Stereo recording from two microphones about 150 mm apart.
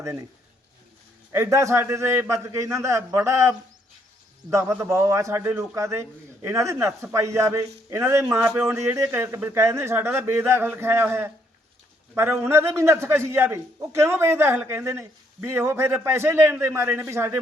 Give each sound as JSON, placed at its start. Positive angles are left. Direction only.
{"t": 0.0, "sound": "a man's voice", "side_deg": -20}
{"t": 1.3, "sound": "a man's voice", "side_deg": -20}